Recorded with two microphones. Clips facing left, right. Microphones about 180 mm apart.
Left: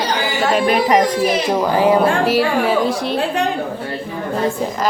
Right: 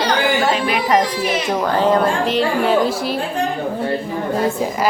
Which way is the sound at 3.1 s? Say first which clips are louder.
Left 3 dB; 75° left (ahead or behind).